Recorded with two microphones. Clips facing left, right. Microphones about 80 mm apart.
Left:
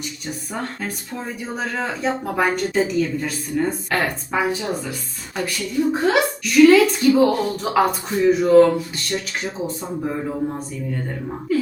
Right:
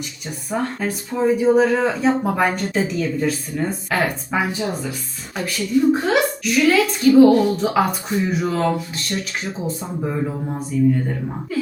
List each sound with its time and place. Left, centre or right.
0.5 s speech: centre